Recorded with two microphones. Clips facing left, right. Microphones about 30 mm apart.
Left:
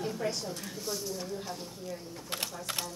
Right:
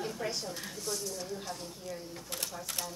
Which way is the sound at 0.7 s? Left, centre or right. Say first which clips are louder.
Left 1 dB; centre.